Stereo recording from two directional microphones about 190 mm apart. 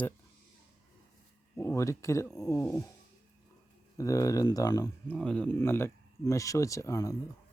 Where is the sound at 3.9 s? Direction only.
15° left (ahead or behind).